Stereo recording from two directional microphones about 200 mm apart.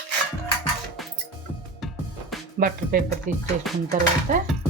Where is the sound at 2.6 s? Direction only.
45° right (ahead or behind).